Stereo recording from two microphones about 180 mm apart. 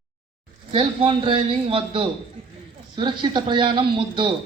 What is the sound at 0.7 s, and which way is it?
A man's voice, 30° right (ahead or behind).